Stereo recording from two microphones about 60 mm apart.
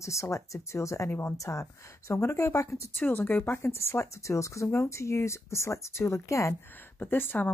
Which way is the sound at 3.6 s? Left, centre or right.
Left.